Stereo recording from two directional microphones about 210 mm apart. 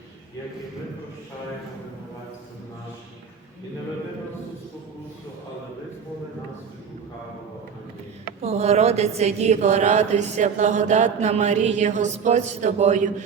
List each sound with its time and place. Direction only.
8.4 s speech: 30° right (ahead or behind)